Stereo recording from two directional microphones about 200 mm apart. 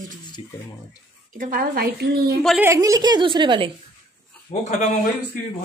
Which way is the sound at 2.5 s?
15° right (ahead or behind).